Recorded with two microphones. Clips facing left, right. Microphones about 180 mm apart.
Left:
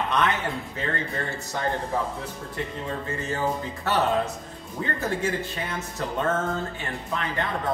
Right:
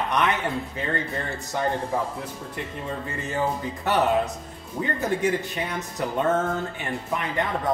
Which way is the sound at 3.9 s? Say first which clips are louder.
Right 2 dB; 15° right (ahead or behind).